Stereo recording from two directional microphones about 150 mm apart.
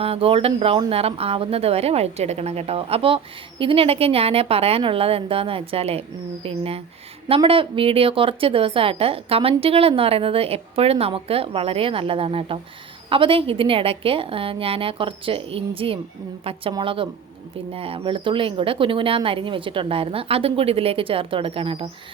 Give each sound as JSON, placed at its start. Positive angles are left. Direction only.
{"t": 0.0, "sound": "a woman's voice", "side_deg": -40}